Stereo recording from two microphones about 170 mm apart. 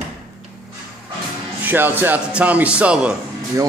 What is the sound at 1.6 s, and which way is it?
Speech, 10° right (ahead or behind).